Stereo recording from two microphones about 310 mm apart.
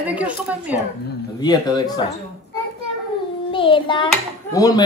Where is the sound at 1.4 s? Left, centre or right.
Centre.